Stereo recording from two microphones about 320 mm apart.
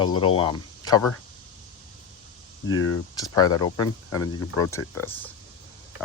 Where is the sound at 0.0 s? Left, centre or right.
Centre.